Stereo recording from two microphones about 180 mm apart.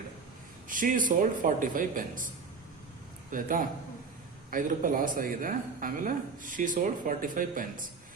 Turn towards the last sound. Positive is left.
turn(degrees=-50)  # may be behind; listen again after turning